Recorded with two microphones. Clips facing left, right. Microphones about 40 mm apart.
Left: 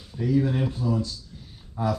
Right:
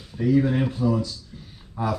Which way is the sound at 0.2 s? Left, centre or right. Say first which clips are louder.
Right 3 dB; right.